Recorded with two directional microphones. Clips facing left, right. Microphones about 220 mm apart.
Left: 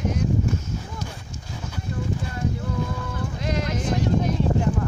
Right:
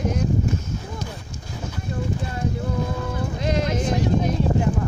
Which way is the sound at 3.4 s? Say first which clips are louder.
Right 4 dB; 25° right (ahead or behind).